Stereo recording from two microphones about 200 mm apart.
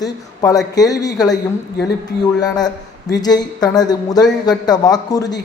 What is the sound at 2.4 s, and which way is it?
A man's voice, 20° left (ahead or behind).